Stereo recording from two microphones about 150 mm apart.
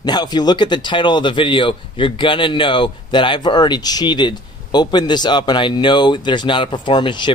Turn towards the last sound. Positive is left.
turn(degrees=30)  # may be behind; listen again after turning